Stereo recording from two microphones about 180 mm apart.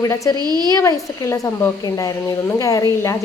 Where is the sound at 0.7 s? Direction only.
15° left (ahead or behind).